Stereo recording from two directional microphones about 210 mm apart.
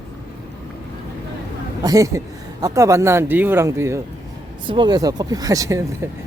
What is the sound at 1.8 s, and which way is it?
Speech, 15° right (ahead or behind).